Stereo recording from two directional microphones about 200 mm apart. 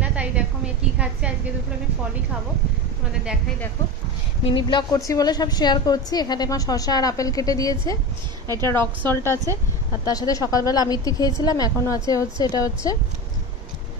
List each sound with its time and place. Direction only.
0.0 s a sound: 5° right (ahead or behind)
0.9 s a woman's voice: 5° right (ahead or behind)
4.5 s a woman's voice: 25° left (ahead or behind)